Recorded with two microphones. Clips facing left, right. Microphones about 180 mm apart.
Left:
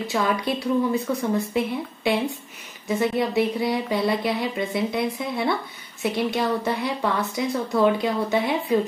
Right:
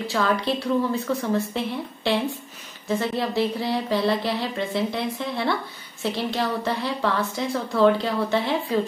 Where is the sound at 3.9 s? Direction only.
10° left (ahead or behind).